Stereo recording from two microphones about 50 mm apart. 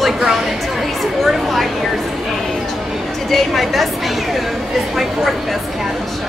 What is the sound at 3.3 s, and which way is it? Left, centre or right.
Speech, centre.